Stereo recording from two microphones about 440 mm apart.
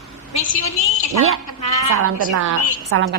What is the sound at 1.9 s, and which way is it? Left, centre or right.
A woman's voice, right.